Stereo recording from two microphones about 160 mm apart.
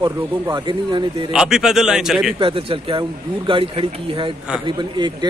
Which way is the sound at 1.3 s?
5° right (ahead or behind).